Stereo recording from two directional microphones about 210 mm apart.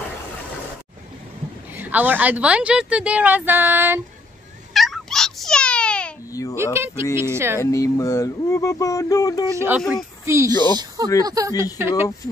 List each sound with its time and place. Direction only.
1.8 s speech: 10° right (ahead or behind)
4.7 s cat: centre (ahead or behind)
6.5 s speech: 10° right (ahead or behind)
7.6 s a sound: 15° left (ahead or behind)
9.6 s speech: 10° right (ahead or behind)